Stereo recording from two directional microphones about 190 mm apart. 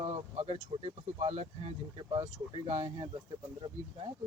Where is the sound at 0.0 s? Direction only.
30° right (ahead or behind).